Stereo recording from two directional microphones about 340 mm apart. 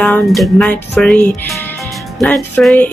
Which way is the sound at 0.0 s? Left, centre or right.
Centre.